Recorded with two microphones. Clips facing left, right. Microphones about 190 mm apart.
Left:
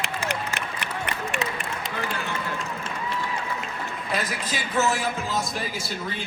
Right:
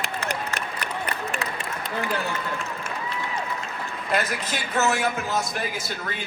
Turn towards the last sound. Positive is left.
turn(degrees=-60)  # may be behind; listen again after turning